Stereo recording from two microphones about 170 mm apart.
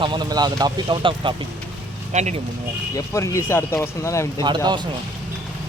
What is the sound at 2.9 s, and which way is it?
Speech, 20° left (ahead or behind).